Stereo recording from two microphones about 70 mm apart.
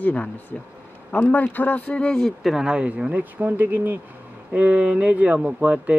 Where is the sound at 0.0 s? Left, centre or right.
Left.